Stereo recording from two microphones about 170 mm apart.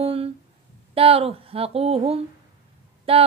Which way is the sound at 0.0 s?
35° right (ahead or behind).